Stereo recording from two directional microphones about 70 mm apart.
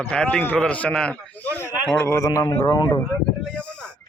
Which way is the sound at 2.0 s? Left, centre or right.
Left.